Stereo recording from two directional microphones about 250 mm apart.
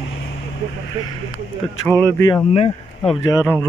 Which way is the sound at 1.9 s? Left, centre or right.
Centre.